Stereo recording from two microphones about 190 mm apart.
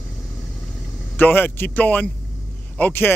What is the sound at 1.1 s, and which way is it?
Speech, 10° left (ahead or behind).